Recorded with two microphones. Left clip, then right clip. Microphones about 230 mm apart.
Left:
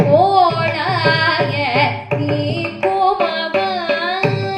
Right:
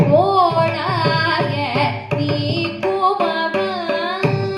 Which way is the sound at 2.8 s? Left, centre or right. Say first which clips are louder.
Left 3 dB; right.